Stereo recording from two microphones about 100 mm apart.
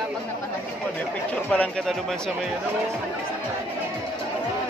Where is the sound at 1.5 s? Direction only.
10° left (ahead or behind).